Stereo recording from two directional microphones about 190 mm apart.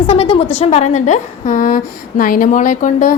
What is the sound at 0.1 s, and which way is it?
A woman's voice, 30° left (ahead or behind).